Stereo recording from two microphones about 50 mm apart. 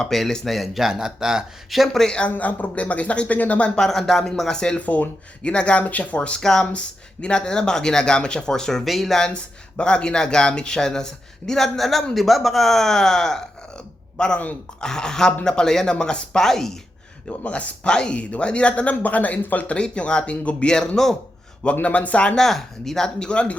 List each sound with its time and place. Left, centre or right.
0.0 s speech: centre
0.9 s speech: centre
1.7 s speech: centre
2.3 s speech: left
3.8 s speech: centre
4.9 s speech: left
6.4 s speech: centre
8.8 s speech: centre
9.3 s speech: centre
17.2 s speech: left
17.8 s speech: centre; by 19.6 s left
19.6 s speech: left
21.8 s speech: left
22.4 s speech: centre